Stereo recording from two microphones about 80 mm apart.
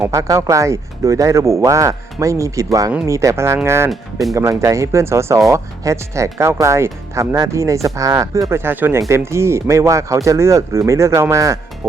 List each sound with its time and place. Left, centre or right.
0.1 s speech: right
3.8 s speech: centre
4.4 s speech: right
8.5 s speech: right
9.0 s speech: right